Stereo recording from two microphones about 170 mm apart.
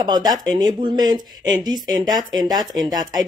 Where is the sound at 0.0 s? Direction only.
25° right (ahead or behind).